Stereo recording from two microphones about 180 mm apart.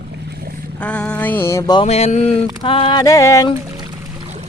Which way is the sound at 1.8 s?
40° left (ahead or behind).